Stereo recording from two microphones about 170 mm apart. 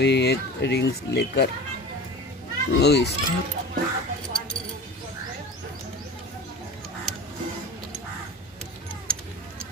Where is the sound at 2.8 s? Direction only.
80° left.